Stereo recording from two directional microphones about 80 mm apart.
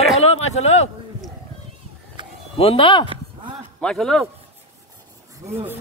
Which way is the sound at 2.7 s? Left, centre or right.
Left.